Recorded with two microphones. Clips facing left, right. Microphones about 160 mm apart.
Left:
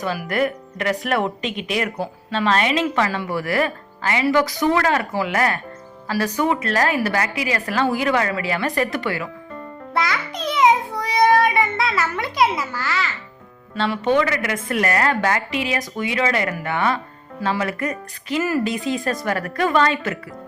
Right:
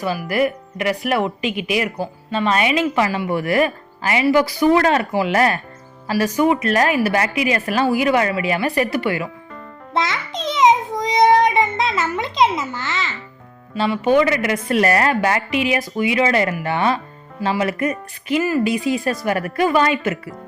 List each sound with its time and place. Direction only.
0.0 s a woman's voice: 5° right (ahead or behind); by 5.5 s 25° right (ahead or behind)
6.1 s speech: 15° right (ahead or behind)
9.9 s child singing: 20° right (ahead or behind)
13.7 s a woman's voice: 5° right (ahead or behind); by 15.1 s 25° right (ahead or behind)
15.1 s a woman's voice: 15° right (ahead or behind)